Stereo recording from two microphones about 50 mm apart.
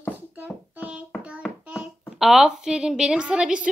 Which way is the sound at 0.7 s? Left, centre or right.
Right.